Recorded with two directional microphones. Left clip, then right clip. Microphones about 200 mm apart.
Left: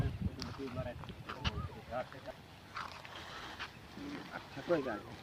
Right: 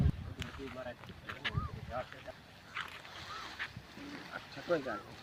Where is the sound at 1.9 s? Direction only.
Centre (ahead or behind).